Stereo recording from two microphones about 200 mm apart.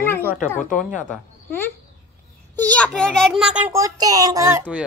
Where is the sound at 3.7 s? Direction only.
15° right (ahead or behind).